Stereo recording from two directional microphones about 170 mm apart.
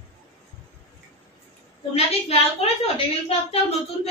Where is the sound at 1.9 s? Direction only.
35° left (ahead or behind).